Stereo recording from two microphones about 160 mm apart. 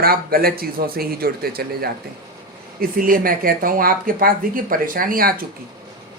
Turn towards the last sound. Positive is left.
turn(degrees=-65)  # may be behind; listen again after turning